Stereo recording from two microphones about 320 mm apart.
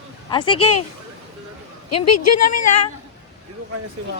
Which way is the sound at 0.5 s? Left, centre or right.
Left.